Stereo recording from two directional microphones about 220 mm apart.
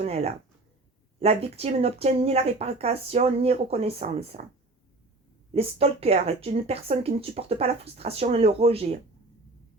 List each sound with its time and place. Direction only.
0.0 s speech: 30° right (ahead or behind)
5.5 s speech: 25° right (ahead or behind)